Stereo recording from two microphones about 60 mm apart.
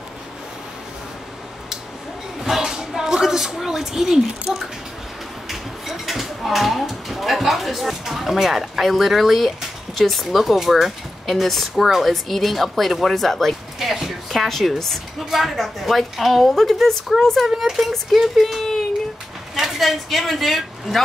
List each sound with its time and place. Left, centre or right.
2.4 s a sound: centre
5.5 s a woman's voice: centre
19.5 s speech: centre